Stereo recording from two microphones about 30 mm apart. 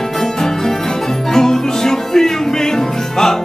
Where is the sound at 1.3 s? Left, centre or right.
Centre.